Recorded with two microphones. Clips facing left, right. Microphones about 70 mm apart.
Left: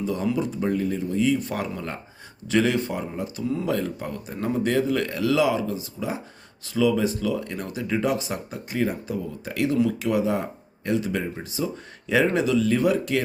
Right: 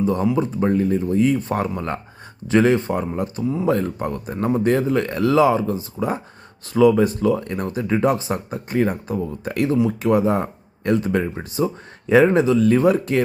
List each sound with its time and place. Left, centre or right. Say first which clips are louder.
0.0 s speech: right 6 dB; right